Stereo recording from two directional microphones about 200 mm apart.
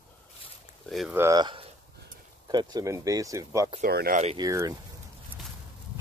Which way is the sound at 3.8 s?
50° right (ahead or behind).